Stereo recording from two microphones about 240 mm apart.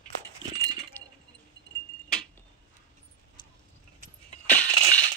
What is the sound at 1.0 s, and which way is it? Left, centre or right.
Chink, centre.